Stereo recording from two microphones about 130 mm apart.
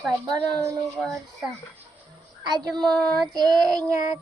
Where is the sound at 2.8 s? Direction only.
10° left (ahead or behind).